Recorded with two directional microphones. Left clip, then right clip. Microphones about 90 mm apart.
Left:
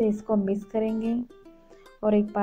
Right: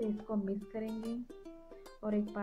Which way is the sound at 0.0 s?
45° left (ahead or behind).